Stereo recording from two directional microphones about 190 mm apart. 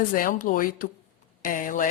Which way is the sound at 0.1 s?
45° left (ahead or behind).